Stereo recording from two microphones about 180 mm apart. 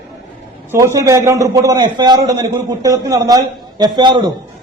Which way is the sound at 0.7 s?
15° right (ahead or behind).